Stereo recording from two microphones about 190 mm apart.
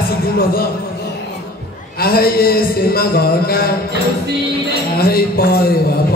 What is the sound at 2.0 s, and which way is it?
A man's voice, 50° left (ahead or behind).